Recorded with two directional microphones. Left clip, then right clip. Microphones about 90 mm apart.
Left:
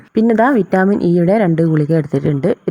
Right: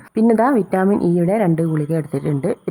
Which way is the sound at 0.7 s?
30° left (ahead or behind).